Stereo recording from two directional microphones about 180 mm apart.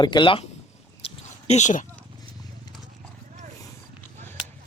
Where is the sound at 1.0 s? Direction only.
35° left (ahead or behind).